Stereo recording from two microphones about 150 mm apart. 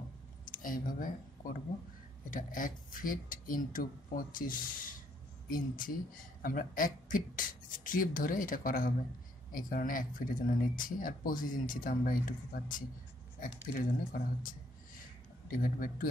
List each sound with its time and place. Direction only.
0.5 s speech: 65° left (ahead or behind)